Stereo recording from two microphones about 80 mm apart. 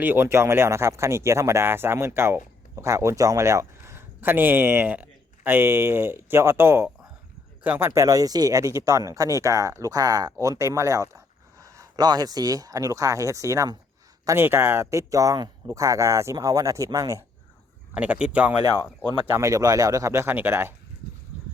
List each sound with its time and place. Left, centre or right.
0.0 s speech: right
7.9 s speech: right
11.6 s a sound: right
11.9 s speech: right
14.3 s speech: right
17.9 s speech: centre
19.2 s speech: right
20.2 s speech: right